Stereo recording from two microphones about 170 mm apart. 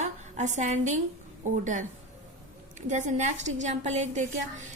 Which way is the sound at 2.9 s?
45° right (ahead or behind).